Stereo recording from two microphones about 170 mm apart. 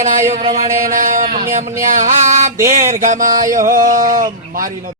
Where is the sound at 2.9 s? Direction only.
50° right (ahead or behind).